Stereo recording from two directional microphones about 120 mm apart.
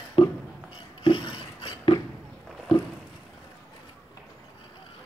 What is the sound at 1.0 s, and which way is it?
Filing, 45° left (ahead or behind).